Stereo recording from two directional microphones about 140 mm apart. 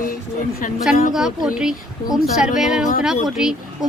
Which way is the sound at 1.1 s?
5° right (ahead or behind).